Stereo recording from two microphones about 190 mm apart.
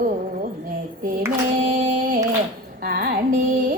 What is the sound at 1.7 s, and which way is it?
Singing, 45° right (ahead or behind).